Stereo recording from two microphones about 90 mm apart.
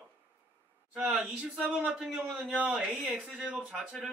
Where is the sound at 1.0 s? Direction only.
15° right (ahead or behind).